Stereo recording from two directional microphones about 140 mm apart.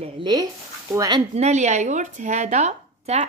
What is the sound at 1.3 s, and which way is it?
Speech, 55° right (ahead or behind).